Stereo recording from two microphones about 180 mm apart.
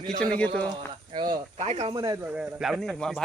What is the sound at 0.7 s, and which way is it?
Speech, 25° right (ahead or behind).